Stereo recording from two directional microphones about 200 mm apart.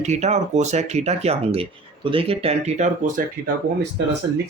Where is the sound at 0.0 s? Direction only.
35° right (ahead or behind).